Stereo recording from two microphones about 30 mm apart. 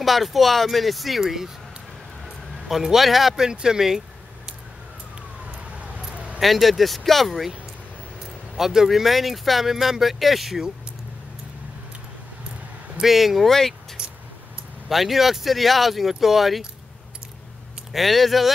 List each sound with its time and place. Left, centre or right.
0.0 s speech: centre
1.2 s speech: centre
2.2 s vehicle: centre
3.3 s speech: right
5.5 s a sound: right
6.4 s speech: centre
8.5 s speech: centre
13.0 s speech: centre
13.5 s speech: centre
14.9 s speech: centre
17.9 s speech: centre